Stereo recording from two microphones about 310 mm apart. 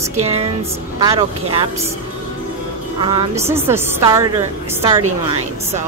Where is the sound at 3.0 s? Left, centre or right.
Centre.